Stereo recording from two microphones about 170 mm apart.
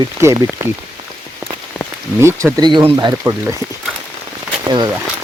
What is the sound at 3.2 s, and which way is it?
Speech, 15° right (ahead or behind).